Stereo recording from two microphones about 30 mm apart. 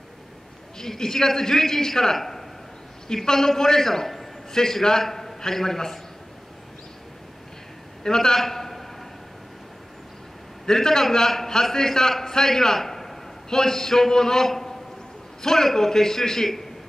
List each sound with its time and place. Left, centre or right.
0.7 s a man's voice: centre
8.0 s a man's voice: centre
10.6 s a man's voice: centre